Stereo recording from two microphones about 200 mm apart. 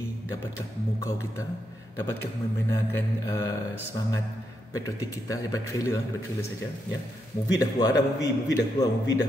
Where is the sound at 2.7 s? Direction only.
10° left (ahead or behind).